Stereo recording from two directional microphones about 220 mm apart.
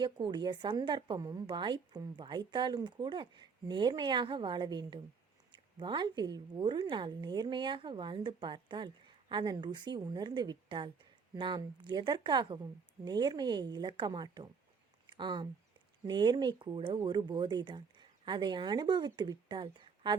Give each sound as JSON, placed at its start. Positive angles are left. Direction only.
{"t": 0.0, "sound": "a woman's voice", "side_deg": -20}